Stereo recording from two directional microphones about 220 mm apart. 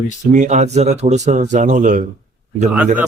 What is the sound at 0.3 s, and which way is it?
A man's voice, 35° right (ahead or behind).